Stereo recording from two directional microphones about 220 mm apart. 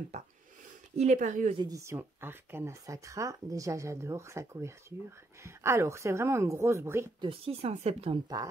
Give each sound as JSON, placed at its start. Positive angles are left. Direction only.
{"t": 0.1, "sound": "a sound", "side_deg": -30}
{"t": 0.9, "sound": "speech", "side_deg": -35}
{"t": 1.6, "sound": "speech", "side_deg": -15}
{"t": 7.2, "sound": "speech", "side_deg": -25}